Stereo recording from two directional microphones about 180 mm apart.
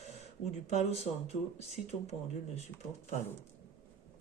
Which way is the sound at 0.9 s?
35° left (ahead or behind).